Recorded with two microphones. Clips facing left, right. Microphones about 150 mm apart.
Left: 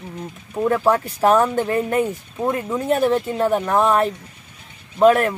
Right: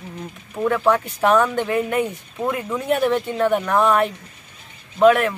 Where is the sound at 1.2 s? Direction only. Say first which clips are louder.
Left 1 dB; 35° left (ahead or behind).